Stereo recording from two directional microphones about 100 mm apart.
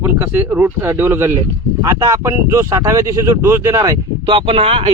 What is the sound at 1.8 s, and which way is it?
Speech, 35° right (ahead or behind).